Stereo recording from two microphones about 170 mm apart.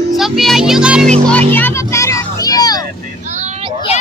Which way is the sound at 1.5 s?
15° left (ahead or behind).